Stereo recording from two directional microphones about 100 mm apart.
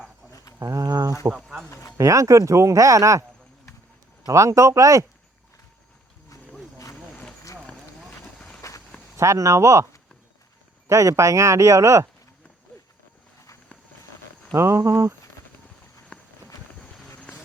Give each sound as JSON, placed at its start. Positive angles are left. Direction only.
{"t": 0.3, "sound": "a sound", "side_deg": 35}
{"t": 0.6, "sound": "speech", "side_deg": -35}
{"t": 1.4, "sound": "speech", "side_deg": -5}
{"t": 2.0, "sound": "speech", "side_deg": -30}
{"t": 4.3, "sound": "speech", "side_deg": -30}
{"t": 8.0, "sound": "boat", "side_deg": 5}
{"t": 9.1, "sound": "speech", "side_deg": -30}
{"t": 10.8, "sound": "speech", "side_deg": -30}
{"t": 14.5, "sound": "speech", "side_deg": -30}
{"t": 16.1, "sound": "a sound", "side_deg": 10}